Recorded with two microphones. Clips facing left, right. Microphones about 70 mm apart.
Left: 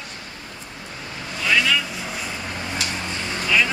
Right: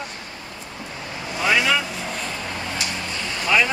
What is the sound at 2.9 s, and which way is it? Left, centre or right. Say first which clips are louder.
Vehicle: left 1 dB; left.